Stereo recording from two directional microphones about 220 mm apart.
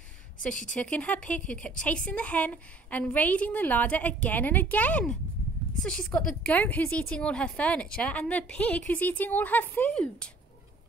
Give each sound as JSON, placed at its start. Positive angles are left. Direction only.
{"t": 0.5, "sound": "speech", "side_deg": 35}
{"t": 0.7, "sound": "a woman's voice", "side_deg": 5}